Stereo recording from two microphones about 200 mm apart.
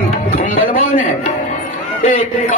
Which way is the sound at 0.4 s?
45° left (ahead or behind).